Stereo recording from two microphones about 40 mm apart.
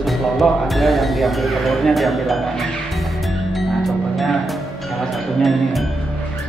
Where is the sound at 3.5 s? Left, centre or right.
Centre.